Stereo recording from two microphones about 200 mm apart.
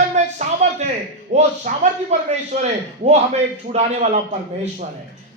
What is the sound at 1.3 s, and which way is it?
A man's voice, 35° right (ahead or behind).